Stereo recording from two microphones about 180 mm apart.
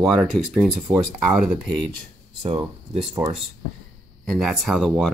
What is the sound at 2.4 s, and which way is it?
Speech, 30° right (ahead or behind).